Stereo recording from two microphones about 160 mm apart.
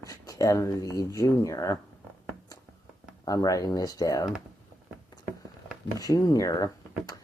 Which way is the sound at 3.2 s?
20° left (ahead or behind).